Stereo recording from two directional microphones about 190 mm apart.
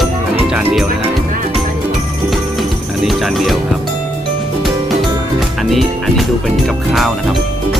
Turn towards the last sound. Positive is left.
turn(degrees=0)  # may be behind; listen again after turning